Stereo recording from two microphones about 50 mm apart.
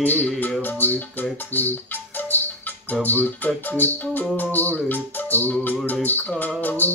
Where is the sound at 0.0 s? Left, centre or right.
Left.